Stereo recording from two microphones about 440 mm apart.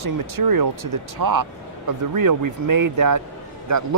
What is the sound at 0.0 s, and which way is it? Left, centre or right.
Speech, right.